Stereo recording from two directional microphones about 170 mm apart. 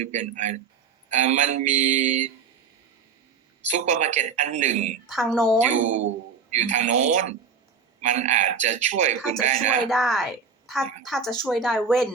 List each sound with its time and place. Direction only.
0.0 s a man's voice: 45° right (ahead or behind)
3.7 s a man's voice: 45° right (ahead or behind)
5.0 s a woman's voice: centre (ahead or behind)
5.5 s a man's voice: 40° right (ahead or behind)
9.9 s a woman's voice: centre (ahead or behind)